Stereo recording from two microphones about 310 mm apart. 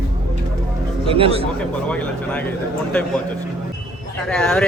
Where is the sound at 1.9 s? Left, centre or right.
Centre.